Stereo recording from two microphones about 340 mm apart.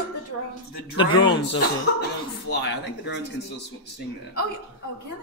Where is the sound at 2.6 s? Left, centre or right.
Left.